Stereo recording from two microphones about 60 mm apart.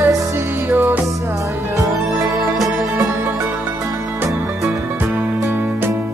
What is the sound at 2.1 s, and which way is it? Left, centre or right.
Music, centre.